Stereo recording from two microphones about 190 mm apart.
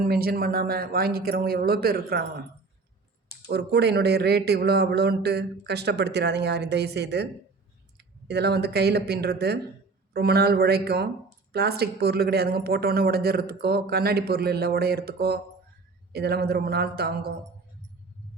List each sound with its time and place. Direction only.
0.0 s speech: 50° right (ahead or behind)
3.5 s speech: 60° right (ahead or behind)